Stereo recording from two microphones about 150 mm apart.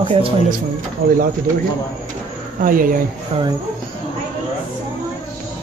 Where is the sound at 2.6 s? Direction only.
65° right (ahead or behind).